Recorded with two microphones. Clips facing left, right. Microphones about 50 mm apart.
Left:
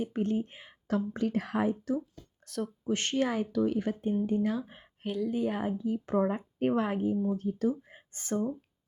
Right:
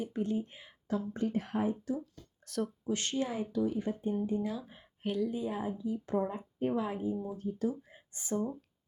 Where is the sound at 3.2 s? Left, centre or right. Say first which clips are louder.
Left 5 dB; left.